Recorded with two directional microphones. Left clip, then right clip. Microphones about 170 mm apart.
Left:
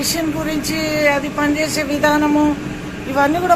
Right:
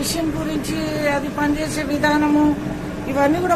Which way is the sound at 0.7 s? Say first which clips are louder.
Left 6 dB; 10° left (ahead or behind).